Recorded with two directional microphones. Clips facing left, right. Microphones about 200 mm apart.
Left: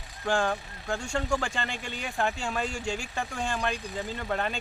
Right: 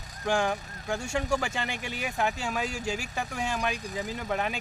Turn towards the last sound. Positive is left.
turn(degrees=-10)  # may be behind; listen again after turning